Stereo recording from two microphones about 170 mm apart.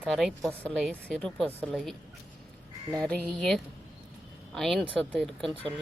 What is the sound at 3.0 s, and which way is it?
Speech, 5° left (ahead or behind).